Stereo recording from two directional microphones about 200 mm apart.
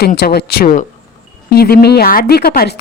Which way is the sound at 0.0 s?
50° left (ahead or behind).